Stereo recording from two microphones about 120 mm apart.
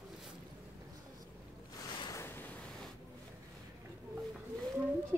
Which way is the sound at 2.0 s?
25° left (ahead or behind).